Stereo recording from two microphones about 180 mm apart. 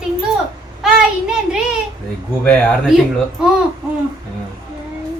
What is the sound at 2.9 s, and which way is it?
Speech, centre (ahead or behind).